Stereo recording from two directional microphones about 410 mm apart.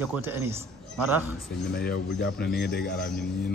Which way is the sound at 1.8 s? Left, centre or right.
Left.